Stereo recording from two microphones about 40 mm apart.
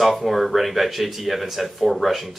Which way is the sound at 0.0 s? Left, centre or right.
Centre.